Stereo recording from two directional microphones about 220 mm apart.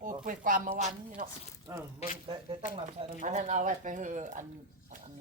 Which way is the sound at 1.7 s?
15° right (ahead or behind).